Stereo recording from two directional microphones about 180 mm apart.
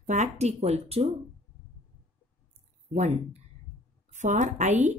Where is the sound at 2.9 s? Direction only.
40° right (ahead or behind).